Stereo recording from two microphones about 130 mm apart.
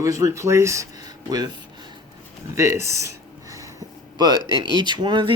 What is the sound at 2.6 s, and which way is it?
Speech, 20° right (ahead or behind).